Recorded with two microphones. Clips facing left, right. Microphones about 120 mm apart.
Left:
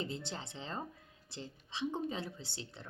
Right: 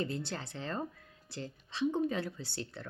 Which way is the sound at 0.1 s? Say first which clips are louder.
Right 4 dB; 20° left (ahead or behind).